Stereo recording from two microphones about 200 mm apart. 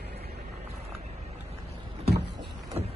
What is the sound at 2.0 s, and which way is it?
Vehicle, 55° right (ahead or behind).